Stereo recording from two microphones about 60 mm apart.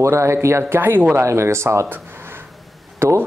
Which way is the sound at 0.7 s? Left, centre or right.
Right.